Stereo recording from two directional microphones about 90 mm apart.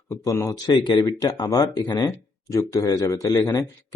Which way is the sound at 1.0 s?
45° left (ahead or behind).